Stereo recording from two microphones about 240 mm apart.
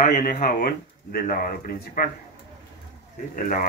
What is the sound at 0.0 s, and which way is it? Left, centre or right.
Speech, left.